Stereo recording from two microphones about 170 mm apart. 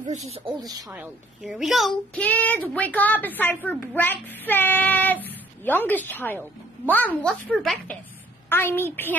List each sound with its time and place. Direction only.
0.0 s speech: 40° right (ahead or behind)
0.6 s speech: 20° right (ahead or behind)
0.9 s a woman's voice: 5° right (ahead or behind)
2.1 s child singing: 10° left (ahead or behind)
8.5 s child singing: 15° left (ahead or behind)